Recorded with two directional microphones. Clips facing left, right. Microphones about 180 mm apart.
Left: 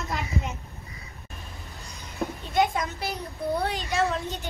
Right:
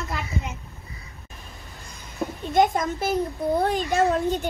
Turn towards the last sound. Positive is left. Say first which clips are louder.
# right 6 dB
turn(degrees=-50)  # may be behind; listen again after turning